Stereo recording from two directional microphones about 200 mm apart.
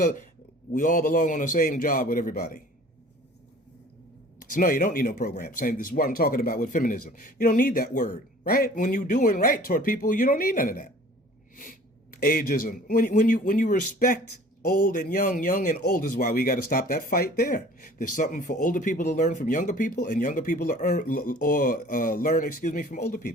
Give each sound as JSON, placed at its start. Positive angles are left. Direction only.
{"t": 0.7, "sound": "speech", "side_deg": 40}
{"t": 4.5, "sound": "speech", "side_deg": 45}
{"t": 12.1, "sound": "speech", "side_deg": 45}